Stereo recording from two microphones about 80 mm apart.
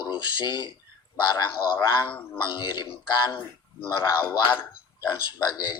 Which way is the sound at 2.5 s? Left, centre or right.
Left.